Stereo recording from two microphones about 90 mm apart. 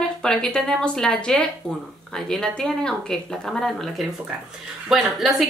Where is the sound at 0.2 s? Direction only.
5° left (ahead or behind).